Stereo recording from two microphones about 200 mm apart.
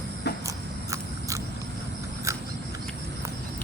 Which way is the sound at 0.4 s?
15° right (ahead or behind).